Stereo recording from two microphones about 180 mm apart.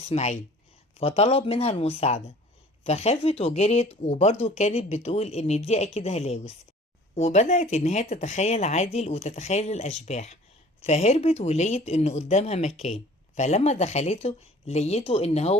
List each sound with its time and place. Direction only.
0.1 s speech: 40° left (ahead or behind)